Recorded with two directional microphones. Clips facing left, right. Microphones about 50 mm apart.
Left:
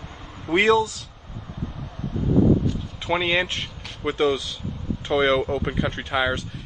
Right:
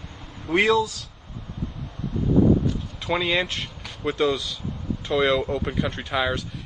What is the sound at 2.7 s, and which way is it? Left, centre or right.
Speech, centre.